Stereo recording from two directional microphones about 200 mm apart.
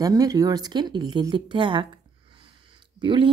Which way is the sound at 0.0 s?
20° right (ahead or behind).